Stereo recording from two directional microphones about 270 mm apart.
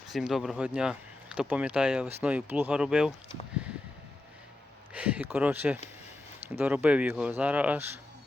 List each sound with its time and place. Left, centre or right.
0.1 s speech: centre
4.9 s speech: centre